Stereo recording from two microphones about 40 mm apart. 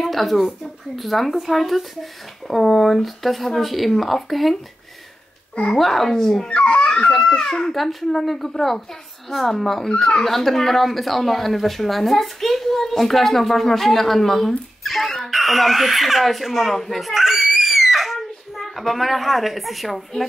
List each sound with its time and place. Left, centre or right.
0.0 s a woman's voice: centre
5.8 s speech: centre
6.5 s babbling: left
7.2 s a child's voice: centre
17.1 s screaming: centre